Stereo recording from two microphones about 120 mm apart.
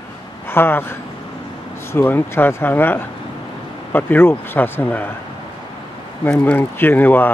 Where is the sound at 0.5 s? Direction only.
20° left (ahead or behind).